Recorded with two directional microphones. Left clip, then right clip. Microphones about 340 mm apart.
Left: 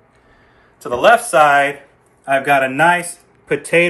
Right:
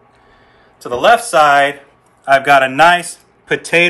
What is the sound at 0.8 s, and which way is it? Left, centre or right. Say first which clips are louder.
Speech: right 1 dB; centre.